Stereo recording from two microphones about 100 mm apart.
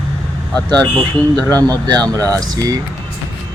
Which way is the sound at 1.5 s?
40° right (ahead or behind).